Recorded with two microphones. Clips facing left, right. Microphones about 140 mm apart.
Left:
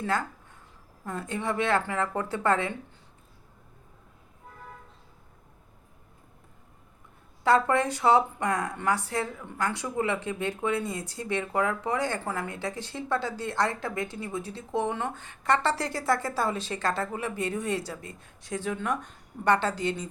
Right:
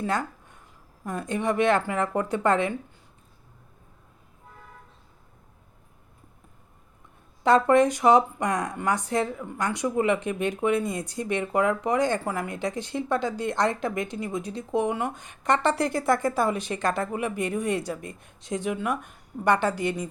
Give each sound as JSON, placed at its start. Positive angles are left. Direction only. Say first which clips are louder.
{"t": 0.0, "sound": "speech", "louder": "right 2 dB", "side_deg": -15}
{"t": 7.4, "sound": "speech", "louder": "right 4 dB", "side_deg": -20}